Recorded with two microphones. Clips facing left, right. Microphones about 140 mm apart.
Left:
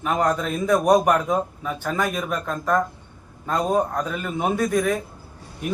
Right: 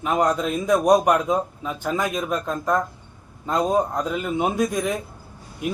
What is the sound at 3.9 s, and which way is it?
A man's voice, 15° right (ahead or behind).